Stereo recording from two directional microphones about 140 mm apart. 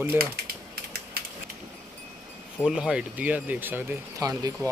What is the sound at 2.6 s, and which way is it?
Speech, 5° right (ahead or behind).